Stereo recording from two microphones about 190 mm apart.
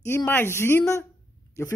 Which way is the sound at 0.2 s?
10° left (ahead or behind).